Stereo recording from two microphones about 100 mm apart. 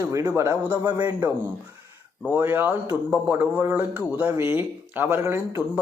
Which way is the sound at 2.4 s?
20° right (ahead or behind).